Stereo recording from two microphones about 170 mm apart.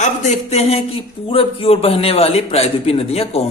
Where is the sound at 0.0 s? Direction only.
40° left (ahead or behind).